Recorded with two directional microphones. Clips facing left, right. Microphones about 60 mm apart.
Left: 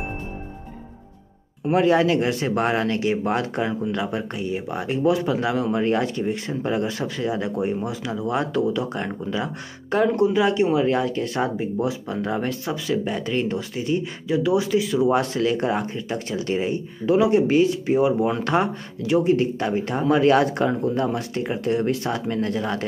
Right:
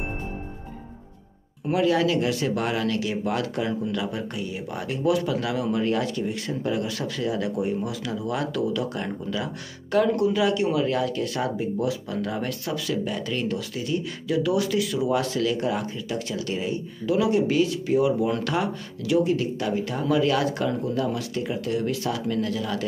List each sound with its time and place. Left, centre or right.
1.7 s speech: left
15.0 s speech: left